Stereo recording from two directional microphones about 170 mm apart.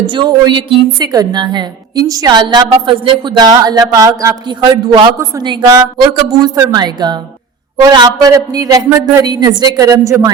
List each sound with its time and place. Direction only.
0.0 s a woman's voice: 25° right (ahead or behind)